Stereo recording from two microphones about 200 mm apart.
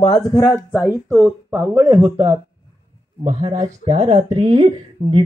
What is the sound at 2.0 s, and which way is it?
A woman's voice, 25° right (ahead or behind).